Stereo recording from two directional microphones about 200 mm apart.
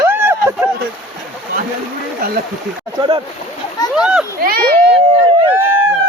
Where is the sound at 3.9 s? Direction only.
5° right (ahead or behind).